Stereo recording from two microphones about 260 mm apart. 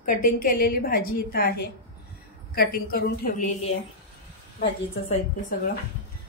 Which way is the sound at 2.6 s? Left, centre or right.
Left.